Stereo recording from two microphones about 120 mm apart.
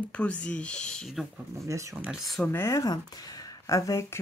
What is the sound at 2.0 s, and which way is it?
Speech, 5° right (ahead or behind).